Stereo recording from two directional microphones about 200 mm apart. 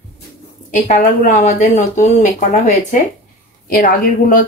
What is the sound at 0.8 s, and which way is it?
Speech, 40° left (ahead or behind).